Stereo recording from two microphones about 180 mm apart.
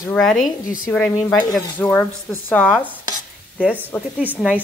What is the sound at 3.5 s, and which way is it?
Speech, 10° right (ahead or behind).